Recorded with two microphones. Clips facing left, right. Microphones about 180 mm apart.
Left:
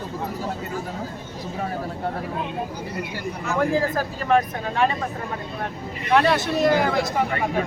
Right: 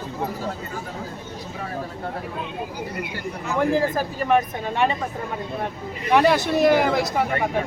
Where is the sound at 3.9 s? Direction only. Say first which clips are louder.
Even; 15° right (ahead or behind).